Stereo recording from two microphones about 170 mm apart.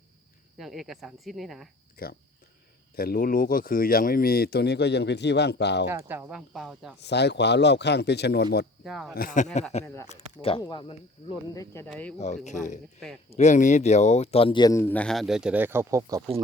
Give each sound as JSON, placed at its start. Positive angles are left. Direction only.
{"t": 0.6, "sound": "speech", "side_deg": 0}
{"t": 2.0, "sound": "speech", "side_deg": 60}
{"t": 5.9, "sound": "speech", "side_deg": -15}
{"t": 7.0, "sound": "speech", "side_deg": 85}
{"t": 8.8, "sound": "speech", "side_deg": 0}
{"t": 9.1, "sound": "speech", "side_deg": 50}
{"t": 9.8, "sound": "speech", "side_deg": 15}
{"t": 10.1, "sound": "speech", "side_deg": 35}
{"t": 11.5, "sound": "speech", "side_deg": 20}
{"t": 12.5, "sound": "speech", "side_deg": 50}